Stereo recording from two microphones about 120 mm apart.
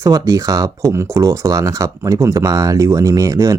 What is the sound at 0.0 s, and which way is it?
Speech, 30° right (ahead or behind).